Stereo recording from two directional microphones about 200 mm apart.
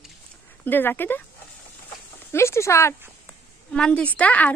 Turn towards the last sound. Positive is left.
turn(degrees=5)  # may be behind; listen again after turning